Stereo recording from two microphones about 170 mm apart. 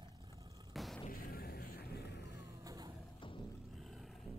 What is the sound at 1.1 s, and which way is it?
Music, 60° left (ahead or behind).